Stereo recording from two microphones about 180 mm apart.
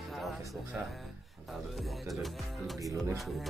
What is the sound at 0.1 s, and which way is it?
Music, centre (ahead or behind).